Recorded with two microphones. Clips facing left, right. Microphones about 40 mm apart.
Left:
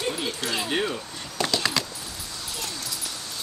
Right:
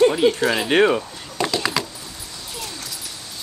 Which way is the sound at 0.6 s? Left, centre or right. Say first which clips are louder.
Right 12 dB; right.